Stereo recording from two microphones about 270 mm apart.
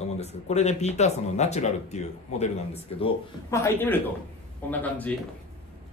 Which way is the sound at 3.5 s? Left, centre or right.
Centre.